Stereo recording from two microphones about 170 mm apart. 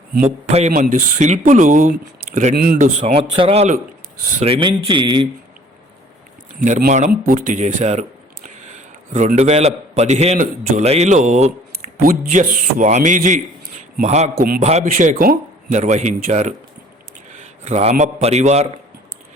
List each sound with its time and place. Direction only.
0.7 s speech: 50° right (ahead or behind)
2.6 s speech: 55° right (ahead or behind); by 5.3 s 25° right (ahead or behind)
6.7 s speech: 50° right (ahead or behind)
9.1 s a man's voice: 40° right (ahead or behind)
11.7 s speech: 50° right (ahead or behind)
14.3 s a man's voice: 60° right (ahead or behind)
14.6 s a man's voice: 40° right (ahead or behind)
14.8 s speech: 55° right (ahead or behind)
17.6 s a man's voice: 40° right (ahead or behind)